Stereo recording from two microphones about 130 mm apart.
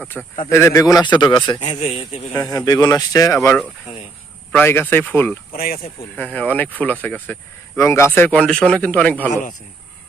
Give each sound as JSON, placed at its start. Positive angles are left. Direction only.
{"t": 0.1, "sound": "speech", "side_deg": 0}
{"t": 0.5, "sound": "a man's voice", "side_deg": 25}
{"t": 1.6, "sound": "a man's voice", "side_deg": 55}
{"t": 2.4, "sound": "speech", "side_deg": 30}
{"t": 4.5, "sound": "speech", "side_deg": 15}
{"t": 5.5, "sound": "speech", "side_deg": 90}
{"t": 6.1, "sound": "speech", "side_deg": 10}